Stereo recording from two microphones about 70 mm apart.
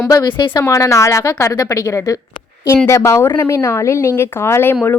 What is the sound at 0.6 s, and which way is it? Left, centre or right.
Speech, left.